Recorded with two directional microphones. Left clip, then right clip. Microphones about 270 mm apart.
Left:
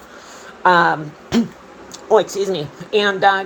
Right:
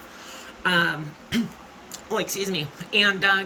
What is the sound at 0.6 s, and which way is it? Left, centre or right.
Speech, left.